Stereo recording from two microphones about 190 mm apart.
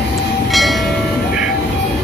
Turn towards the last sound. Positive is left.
turn(degrees=0)  # may be behind; listen again after turning